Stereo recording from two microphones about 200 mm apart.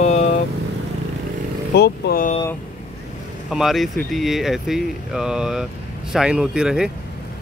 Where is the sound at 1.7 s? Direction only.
55° left (ahead or behind).